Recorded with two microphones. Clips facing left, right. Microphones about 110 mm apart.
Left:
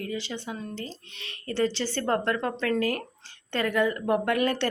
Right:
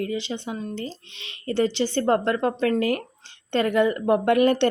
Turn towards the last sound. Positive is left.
turn(degrees=-25)  # may be behind; listen again after turning